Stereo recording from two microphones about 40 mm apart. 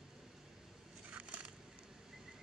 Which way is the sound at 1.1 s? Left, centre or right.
Right.